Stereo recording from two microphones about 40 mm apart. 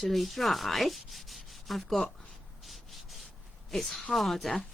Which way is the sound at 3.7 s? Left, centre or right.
Centre.